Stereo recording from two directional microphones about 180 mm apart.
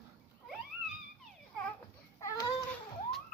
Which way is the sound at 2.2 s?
15° left (ahead or behind).